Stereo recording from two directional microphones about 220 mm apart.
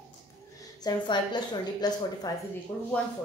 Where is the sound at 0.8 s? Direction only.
20° left (ahead or behind).